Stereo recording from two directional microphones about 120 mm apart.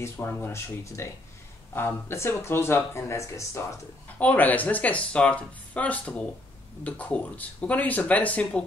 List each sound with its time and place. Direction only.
0.0 s speech: 20° left (ahead or behind)
4.2 s speech: 15° left (ahead or behind)